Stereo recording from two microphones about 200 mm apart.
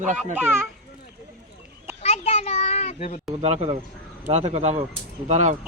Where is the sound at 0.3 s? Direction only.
10° right (ahead or behind).